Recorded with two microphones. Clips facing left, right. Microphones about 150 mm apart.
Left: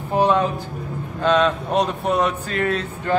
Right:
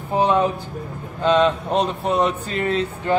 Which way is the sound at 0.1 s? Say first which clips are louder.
Even; 15° right (ahead or behind).